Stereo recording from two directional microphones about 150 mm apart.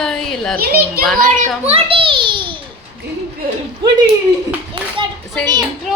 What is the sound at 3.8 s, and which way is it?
Speech, 30° right (ahead or behind).